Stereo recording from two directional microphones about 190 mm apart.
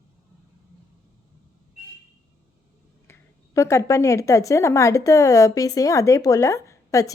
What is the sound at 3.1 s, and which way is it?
A woman's voice, 15° left (ahead or behind).